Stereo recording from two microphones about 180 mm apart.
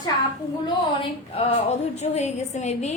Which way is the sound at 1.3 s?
35° left (ahead or behind).